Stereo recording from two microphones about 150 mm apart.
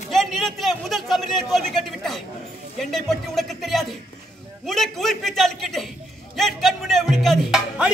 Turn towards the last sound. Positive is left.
turn(degrees=-5)  # may be behind; listen again after turning